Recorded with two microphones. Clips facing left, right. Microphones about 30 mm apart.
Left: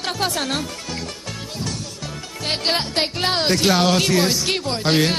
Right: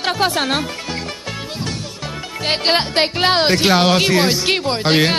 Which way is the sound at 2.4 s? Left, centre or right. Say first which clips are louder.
Right 5 dB; right.